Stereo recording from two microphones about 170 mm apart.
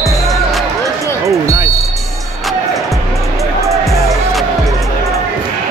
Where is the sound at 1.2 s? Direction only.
20° right (ahead or behind).